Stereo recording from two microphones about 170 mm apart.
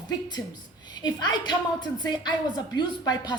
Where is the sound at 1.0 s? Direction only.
25° left (ahead or behind).